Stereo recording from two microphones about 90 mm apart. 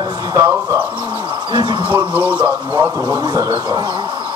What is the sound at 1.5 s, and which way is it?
Speech, 60° right (ahead or behind).